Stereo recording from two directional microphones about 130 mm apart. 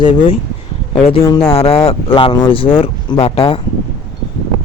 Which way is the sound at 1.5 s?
45° left (ahead or behind).